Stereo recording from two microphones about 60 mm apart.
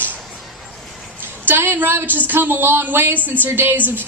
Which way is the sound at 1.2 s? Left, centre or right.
Right.